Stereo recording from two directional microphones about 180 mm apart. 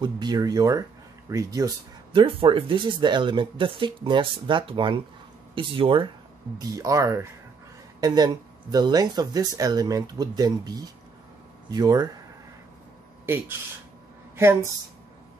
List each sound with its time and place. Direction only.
0.0 s speech: 25° right (ahead or behind)
2.1 s speech: 30° right (ahead or behind)
13.2 s speech: 10° right (ahead or behind)